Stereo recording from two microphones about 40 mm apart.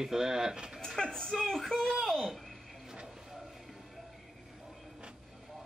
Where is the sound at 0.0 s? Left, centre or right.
Centre.